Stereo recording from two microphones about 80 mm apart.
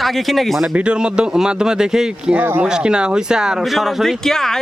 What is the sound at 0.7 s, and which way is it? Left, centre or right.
Speech, centre.